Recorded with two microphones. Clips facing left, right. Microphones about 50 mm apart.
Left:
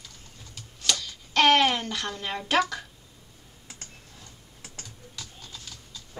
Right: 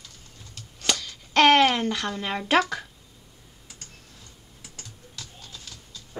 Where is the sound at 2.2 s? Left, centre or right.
Right.